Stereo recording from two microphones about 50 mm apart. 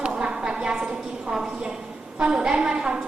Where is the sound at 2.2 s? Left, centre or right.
Centre.